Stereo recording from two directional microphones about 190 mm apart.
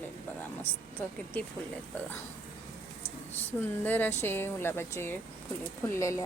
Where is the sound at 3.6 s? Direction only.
10° left (ahead or behind).